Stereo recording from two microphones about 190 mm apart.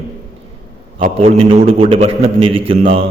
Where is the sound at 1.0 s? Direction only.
30° right (ahead or behind).